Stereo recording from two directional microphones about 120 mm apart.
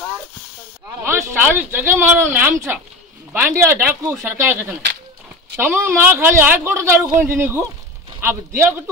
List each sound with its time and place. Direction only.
1.0 s a woman's voice: 15° right (ahead or behind)